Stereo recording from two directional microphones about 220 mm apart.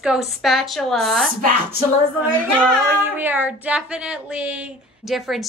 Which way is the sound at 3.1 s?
10° right (ahead or behind).